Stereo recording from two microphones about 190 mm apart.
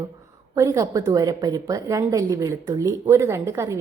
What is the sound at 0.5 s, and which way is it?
A woman's voice, 15° right (ahead or behind).